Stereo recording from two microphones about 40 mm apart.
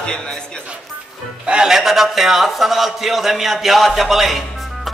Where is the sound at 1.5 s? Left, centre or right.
Centre.